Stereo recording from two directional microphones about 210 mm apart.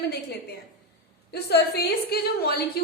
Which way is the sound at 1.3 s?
50° left (ahead or behind).